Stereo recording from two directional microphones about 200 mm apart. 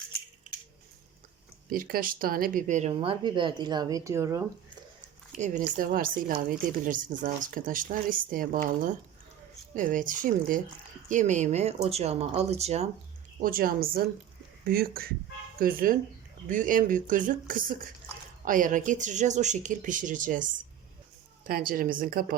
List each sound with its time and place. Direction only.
1.7 s speech: 45° right (ahead or behind); by 4.4 s 15° right (ahead or behind)
5.4 s speech: 40° right (ahead or behind)
13.4 s speech: 45° right (ahead or behind)